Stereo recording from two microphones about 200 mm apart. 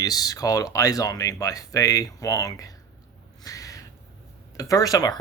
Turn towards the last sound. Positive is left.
turn(degrees=20)  # may be behind; listen again after turning